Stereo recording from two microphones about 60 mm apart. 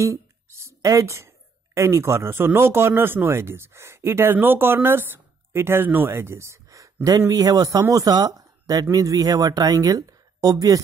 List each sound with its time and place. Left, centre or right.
0.0 s a sound: right
0.8 s speech: right
8.9 s speech: right